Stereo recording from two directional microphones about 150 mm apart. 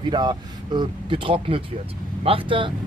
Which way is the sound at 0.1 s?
30° right (ahead or behind).